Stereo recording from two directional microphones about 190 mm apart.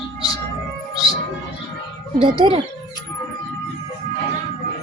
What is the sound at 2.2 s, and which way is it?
Speech, 30° right (ahead or behind).